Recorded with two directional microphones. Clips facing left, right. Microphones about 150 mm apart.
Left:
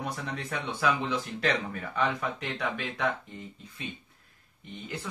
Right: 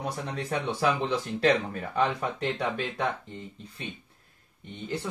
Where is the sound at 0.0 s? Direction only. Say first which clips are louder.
Right 2 dB; 35° right (ahead or behind).